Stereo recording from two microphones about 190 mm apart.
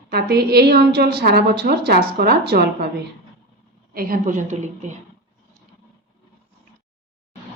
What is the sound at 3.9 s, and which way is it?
A woman's voice, 50° right (ahead or behind).